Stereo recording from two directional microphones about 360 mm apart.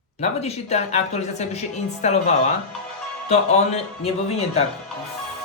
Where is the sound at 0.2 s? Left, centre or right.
Centre.